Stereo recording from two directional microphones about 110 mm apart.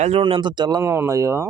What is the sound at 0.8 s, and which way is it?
Speech, 25° right (ahead or behind).